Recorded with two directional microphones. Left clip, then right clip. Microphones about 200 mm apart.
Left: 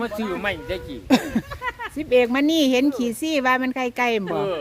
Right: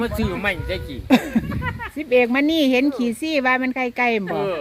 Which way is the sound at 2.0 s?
Centre (ahead or behind).